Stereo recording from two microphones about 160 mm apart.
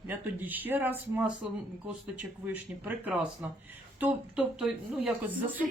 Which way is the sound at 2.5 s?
10° right (ahead or behind).